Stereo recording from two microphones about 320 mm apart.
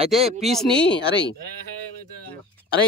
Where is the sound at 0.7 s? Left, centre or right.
Centre.